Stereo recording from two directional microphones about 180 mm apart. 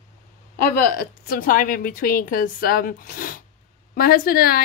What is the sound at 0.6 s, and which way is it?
A woman's voice, 55° left (ahead or behind).